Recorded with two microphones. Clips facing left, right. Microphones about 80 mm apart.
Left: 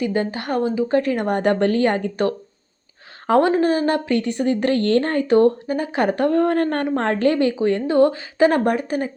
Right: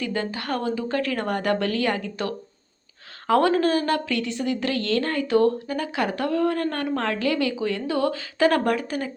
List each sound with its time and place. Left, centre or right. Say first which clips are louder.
0.0 s speech: left 5 dB; left
3.2 s speech: left 3 dB; left